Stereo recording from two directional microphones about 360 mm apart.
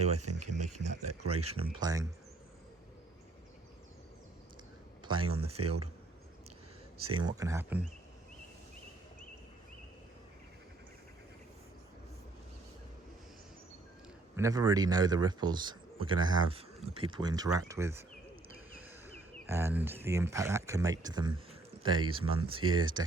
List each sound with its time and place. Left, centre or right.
0.2 s speech: right
1.4 s speech: centre
5.0 s speech: centre
7.2 s speech: centre
14.3 s speech: centre